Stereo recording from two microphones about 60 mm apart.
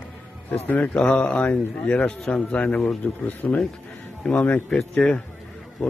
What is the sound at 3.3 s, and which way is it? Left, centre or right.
Speech, left.